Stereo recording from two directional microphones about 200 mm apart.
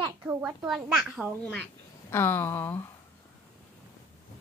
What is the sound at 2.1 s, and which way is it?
Speech, 10° left (ahead or behind).